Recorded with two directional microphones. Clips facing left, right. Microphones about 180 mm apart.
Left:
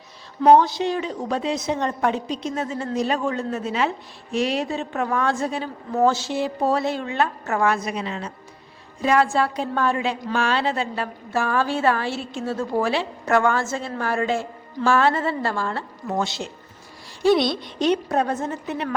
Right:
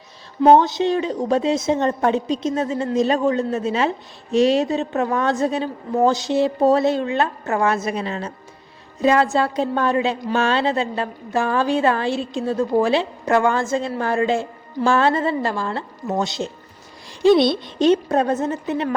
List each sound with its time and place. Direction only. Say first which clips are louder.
0.4 s a woman's voice: right 2 dB; 20° right (ahead or behind); by 8.3 s 40° right (ahead or behind)
9.0 s a woman's voice: right 2 dB; 25° right (ahead or behind)